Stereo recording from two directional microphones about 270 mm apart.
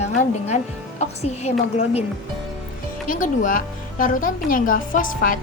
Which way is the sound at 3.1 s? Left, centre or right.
Left.